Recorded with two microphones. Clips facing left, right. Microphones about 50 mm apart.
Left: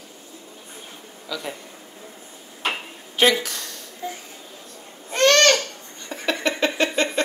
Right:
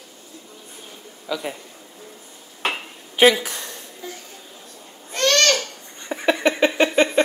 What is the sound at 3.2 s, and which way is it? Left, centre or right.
Speech, centre.